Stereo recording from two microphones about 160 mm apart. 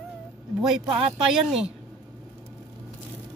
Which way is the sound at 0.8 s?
35° right (ahead or behind).